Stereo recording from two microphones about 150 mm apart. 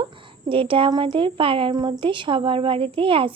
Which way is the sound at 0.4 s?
35° right (ahead or behind).